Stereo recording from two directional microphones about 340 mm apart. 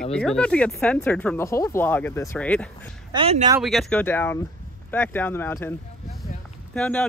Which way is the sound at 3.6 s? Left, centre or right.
Centre.